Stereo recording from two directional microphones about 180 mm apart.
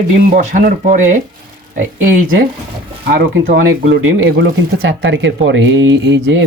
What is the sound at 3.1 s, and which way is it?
Speech, 60° right (ahead or behind).